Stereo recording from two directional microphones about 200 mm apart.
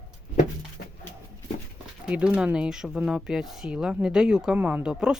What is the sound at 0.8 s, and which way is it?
Music, 50° left (ahead or behind).